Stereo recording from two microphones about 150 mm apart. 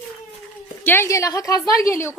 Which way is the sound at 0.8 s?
15° left (ahead or behind).